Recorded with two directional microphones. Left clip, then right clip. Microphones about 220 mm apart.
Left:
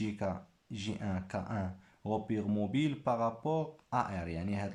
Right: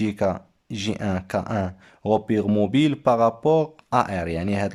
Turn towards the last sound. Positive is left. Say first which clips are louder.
# right 14 dB
turn(degrees=-45)  # may be behind; listen again after turning